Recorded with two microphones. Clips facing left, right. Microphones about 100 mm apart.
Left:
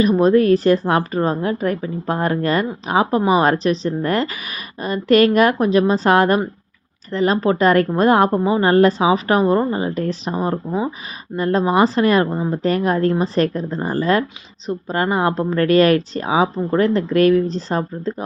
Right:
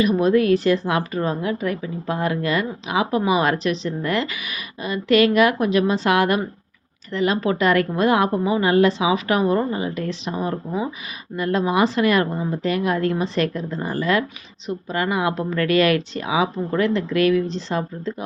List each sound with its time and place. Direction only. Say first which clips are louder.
0.0 s a woman's voice: left 3 dB; 35° left (ahead or behind)